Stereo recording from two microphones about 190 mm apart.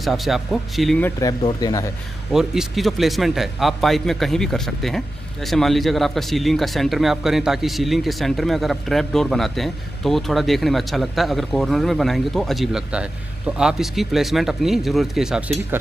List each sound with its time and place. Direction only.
0.0 s a man's voice: centre (ahead or behind)
1.2 s speech: 20° left (ahead or behind)
2.3 s a man's voice: centre (ahead or behind)